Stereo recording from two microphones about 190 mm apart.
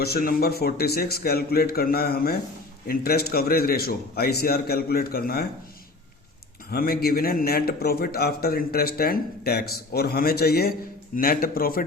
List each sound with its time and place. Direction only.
0.0 s a man's voice: 55° left (ahead or behind)
6.7 s a man's voice: 50° left (ahead or behind)